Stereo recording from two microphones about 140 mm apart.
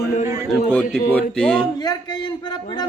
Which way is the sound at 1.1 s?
10° left (ahead or behind).